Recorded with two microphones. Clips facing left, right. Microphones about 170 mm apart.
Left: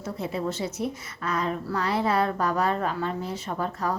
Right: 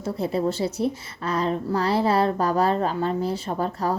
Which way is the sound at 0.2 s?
35° right (ahead or behind).